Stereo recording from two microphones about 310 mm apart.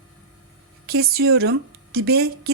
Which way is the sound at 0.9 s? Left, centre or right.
Right.